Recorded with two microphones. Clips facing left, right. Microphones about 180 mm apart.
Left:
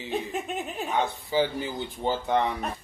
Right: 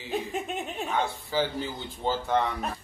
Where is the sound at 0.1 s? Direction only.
Centre (ahead or behind).